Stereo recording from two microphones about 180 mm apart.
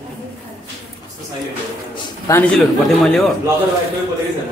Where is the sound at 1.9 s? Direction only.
20° left (ahead or behind).